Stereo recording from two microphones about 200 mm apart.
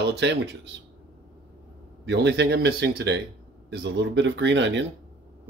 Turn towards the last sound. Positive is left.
turn(degrees=-65)  # may be behind; listen again after turning